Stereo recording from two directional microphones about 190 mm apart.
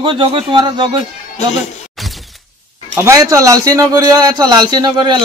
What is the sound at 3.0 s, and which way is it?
A man's voice, 15° right (ahead or behind).